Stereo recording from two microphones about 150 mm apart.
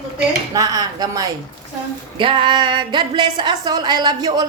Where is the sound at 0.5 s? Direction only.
25° right (ahead or behind).